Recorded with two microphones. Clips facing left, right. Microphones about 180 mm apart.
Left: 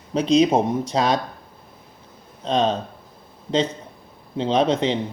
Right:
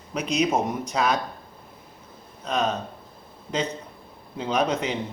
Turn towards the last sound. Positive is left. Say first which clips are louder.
# left 5 dB
turn(degrees=30)  # may be behind; listen again after turning